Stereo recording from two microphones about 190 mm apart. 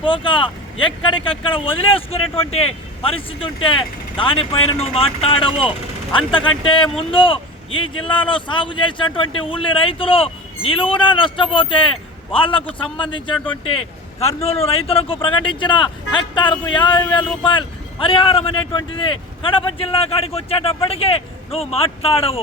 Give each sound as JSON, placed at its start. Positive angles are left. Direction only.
{"t": 0.0, "sound": "speech", "side_deg": 25}